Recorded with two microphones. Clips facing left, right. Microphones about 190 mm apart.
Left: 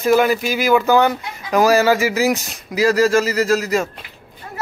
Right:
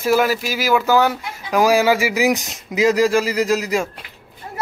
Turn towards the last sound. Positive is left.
turn(degrees=-15)  # may be behind; listen again after turning